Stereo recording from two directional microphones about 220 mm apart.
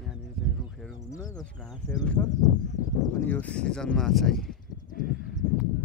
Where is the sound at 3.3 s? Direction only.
5° left (ahead or behind).